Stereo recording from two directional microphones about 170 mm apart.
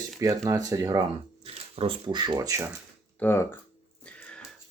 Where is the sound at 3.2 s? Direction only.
15° left (ahead or behind).